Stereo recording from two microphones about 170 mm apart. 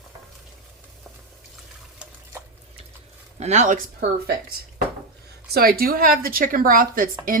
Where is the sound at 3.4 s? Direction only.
40° right (ahead or behind).